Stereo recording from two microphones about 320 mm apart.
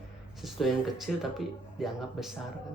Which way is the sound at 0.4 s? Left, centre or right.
Centre.